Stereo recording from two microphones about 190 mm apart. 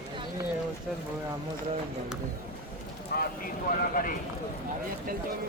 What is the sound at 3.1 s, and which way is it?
Speech, 55° left (ahead or behind).